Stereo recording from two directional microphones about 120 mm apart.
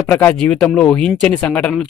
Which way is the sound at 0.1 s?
15° left (ahead or behind).